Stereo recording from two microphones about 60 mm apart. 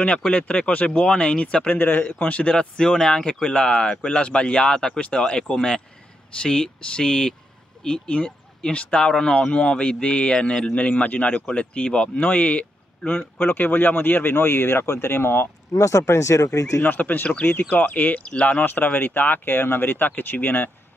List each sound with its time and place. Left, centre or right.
0.0 s speech: left
15.7 s speech: left
16.8 s speech: left